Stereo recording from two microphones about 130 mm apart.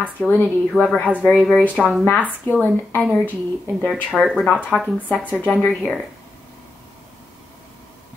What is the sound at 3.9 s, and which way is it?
Speech, centre (ahead or behind).